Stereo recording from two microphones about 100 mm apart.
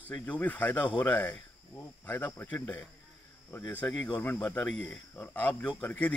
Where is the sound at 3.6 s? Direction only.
10° left (ahead or behind).